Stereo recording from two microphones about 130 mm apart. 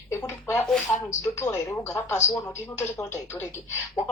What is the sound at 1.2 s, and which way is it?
Speech, 20° left (ahead or behind).